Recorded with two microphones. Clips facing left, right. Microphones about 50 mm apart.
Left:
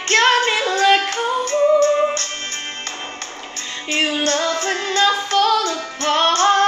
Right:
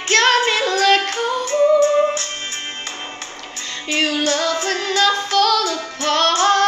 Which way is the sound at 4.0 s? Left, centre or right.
Centre.